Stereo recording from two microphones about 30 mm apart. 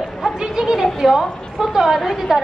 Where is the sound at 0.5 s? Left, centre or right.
Right.